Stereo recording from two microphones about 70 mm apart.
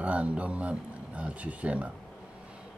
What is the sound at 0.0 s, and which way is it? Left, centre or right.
Speech, centre.